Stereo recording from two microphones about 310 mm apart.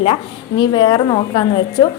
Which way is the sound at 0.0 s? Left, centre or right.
Centre.